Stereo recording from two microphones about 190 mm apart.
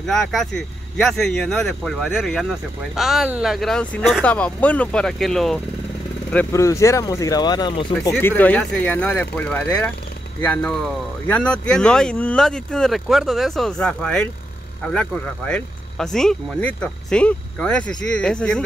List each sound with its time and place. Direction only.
0.0 s speech: centre (ahead or behind)
6.3 s speech: 15° left (ahead or behind)
8.1 s speech: 10° left (ahead or behind)